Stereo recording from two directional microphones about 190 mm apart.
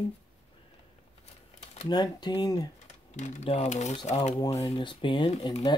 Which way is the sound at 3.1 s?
40° left (ahead or behind).